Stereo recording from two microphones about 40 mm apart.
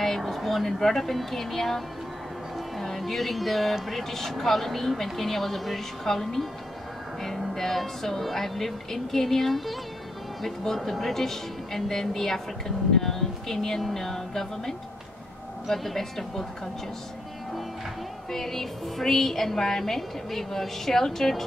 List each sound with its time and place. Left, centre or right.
0.0 s a woman's voice: centre
2.8 s speech: centre
7.2 s music: centre
7.5 s a woman's voice: centre
18.3 s a woman's voice: centre